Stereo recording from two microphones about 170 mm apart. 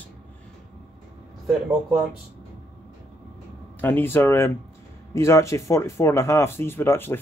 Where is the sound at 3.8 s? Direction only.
10° left (ahead or behind).